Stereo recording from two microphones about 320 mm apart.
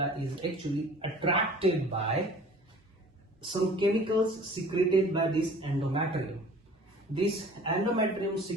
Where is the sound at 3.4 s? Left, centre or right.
Centre.